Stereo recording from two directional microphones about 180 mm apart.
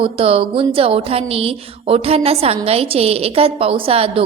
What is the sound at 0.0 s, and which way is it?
A woman's voice, 30° right (ahead or behind).